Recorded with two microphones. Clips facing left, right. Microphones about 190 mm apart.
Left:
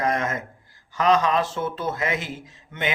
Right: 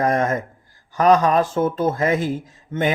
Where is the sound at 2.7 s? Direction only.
45° right (ahead or behind).